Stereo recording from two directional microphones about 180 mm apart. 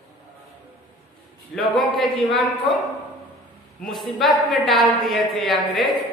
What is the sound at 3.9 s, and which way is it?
A woman's voice, centre (ahead or behind).